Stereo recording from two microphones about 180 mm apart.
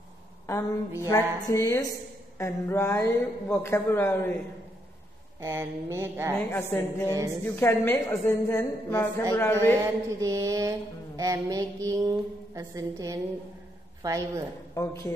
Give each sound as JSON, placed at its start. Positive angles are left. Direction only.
{"t": 1.0, "sound": "a woman's voice", "side_deg": 20}
{"t": 5.4, "sound": "speech", "side_deg": -15}
{"t": 6.3, "sound": "a woman's voice", "side_deg": 10}
{"t": 9.8, "sound": "mantra", "side_deg": -20}
{"t": 14.7, "sound": "a woman's voice", "side_deg": 15}